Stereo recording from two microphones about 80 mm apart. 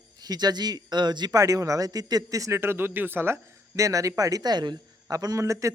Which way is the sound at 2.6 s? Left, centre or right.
Right.